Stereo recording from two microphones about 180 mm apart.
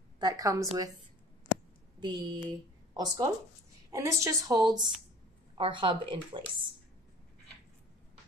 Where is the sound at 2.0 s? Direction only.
25° right (ahead or behind).